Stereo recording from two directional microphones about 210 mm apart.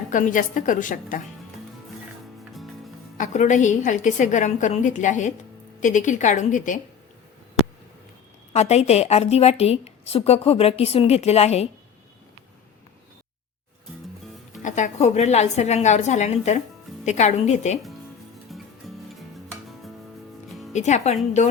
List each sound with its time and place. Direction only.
0.1 s a woman's voice: 40° left (ahead or behind)
2.4 s music: centre (ahead or behind)
3.2 s a woman's voice: 35° left (ahead or behind)
8.5 s a woman's voice: 30° left (ahead or behind)
14.6 s a woman's voice: 35° left (ahead or behind)
18.5 s music: centre (ahead or behind)
20.7 s a woman's voice: 35° left (ahead or behind)